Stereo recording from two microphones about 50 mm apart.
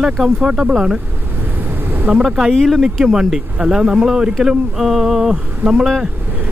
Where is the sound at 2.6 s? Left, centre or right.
Centre.